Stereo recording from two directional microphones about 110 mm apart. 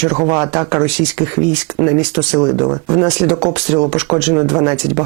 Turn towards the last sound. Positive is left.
turn(degrees=-20)  # may be behind; listen again after turning